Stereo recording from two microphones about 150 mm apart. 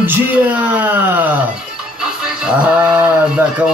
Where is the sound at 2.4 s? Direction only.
10° right (ahead or behind).